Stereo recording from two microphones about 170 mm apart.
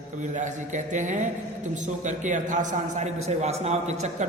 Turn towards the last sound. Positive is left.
turn(degrees=-40)  # may be behind; listen again after turning